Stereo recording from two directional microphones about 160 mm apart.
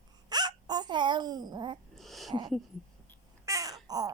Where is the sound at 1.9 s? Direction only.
Centre (ahead or behind).